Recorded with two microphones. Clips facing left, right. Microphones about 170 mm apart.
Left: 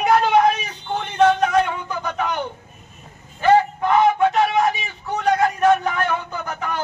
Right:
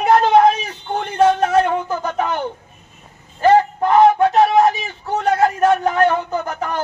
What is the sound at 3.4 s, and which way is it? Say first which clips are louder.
Vehicle: right 3 dB; 40° right (ahead or behind).